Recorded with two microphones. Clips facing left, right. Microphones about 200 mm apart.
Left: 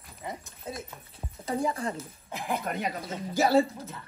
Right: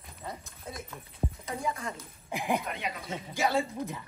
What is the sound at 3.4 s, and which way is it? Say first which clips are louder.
Speech: left 6 dB; 35° left (ahead or behind).